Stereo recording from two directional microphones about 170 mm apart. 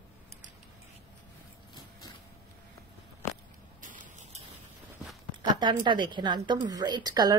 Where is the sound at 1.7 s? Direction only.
25° left (ahead or behind).